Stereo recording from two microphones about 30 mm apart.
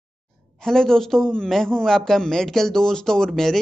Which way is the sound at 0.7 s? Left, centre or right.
Centre.